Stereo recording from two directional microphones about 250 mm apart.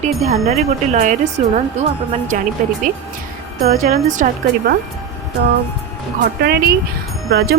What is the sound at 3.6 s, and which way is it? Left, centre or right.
Speech, right.